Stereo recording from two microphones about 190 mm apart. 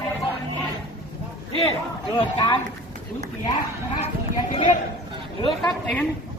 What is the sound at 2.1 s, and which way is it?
Speech, 25° left (ahead or behind).